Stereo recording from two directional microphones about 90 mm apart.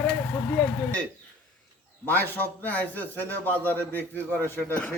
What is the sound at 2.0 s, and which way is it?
A man's voice, 20° left (ahead or behind).